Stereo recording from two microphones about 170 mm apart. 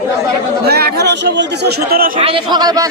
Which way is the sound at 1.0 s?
90° right.